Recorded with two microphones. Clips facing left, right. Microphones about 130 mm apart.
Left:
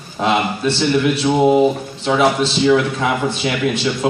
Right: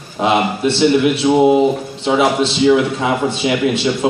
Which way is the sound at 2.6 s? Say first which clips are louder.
Right 2 dB; 20° right (ahead or behind).